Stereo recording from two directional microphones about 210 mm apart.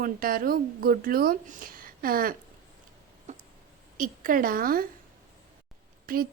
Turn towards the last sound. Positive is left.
turn(degrees=-45)  # may be behind; listen again after turning